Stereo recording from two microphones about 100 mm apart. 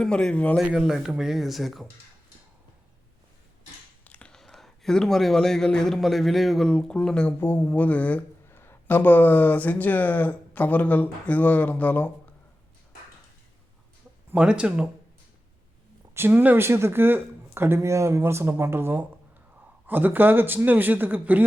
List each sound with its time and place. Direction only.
0.0 s speech: 10° left (ahead or behind)
0.6 s speech: 5° right (ahead or behind)
4.0 s speech: 15° left (ahead or behind)
7.3 s speech: 20° left (ahead or behind)
14.3 s speech: 10° right (ahead or behind)
16.1 s speech: 20° right (ahead or behind)